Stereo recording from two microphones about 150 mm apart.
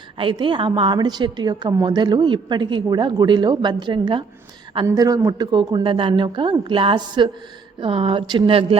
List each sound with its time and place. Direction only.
0.2 s a woman's voice: 35° right (ahead or behind)